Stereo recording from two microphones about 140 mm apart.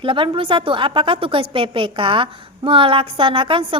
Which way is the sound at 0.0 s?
40° right (ahead or behind).